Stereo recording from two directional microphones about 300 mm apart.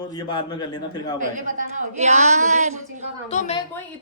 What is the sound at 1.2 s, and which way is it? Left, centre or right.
A woman's voice, right.